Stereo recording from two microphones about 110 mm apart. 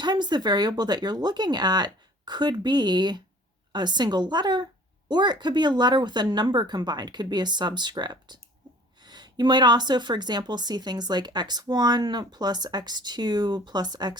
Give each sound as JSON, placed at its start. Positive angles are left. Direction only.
{"t": 0.0, "sound": "a woman's voice", "side_deg": -40}